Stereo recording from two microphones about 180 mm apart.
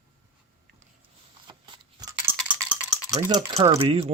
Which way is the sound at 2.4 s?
5° right (ahead or behind).